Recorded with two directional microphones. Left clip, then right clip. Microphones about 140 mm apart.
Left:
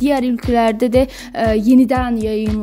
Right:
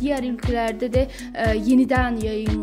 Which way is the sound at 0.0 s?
55° left (ahead or behind).